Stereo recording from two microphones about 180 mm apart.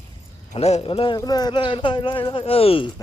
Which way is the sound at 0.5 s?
35° left (ahead or behind).